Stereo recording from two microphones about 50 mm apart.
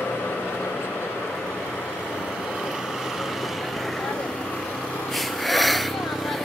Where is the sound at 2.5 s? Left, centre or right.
Centre.